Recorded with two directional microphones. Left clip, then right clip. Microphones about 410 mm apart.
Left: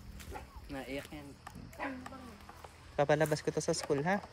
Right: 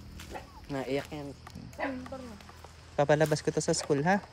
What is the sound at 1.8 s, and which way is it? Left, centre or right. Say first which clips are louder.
Speech: right 6 dB; right.